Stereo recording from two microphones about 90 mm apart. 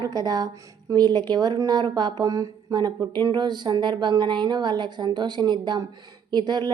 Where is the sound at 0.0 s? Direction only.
45° right (ahead or behind).